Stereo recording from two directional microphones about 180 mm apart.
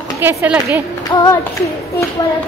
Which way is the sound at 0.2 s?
10° right (ahead or behind).